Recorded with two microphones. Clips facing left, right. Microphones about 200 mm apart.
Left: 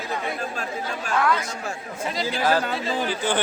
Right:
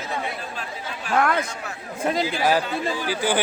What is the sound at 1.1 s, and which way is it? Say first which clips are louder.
Speech: right 2 dB; 55° right (ahead or behind).